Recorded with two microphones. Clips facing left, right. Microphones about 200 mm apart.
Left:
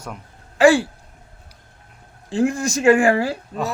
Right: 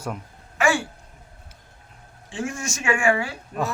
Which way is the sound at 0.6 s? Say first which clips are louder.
Left 9 dB; 35° left (ahead or behind).